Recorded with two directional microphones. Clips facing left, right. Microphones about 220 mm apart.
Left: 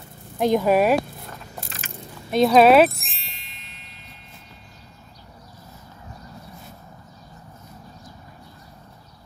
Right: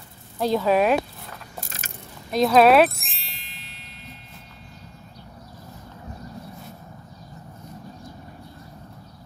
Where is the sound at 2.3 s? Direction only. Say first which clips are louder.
Left 2 dB; centre (ahead or behind).